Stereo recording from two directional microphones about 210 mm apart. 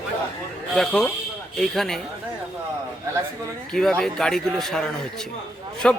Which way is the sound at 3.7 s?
5° left (ahead or behind).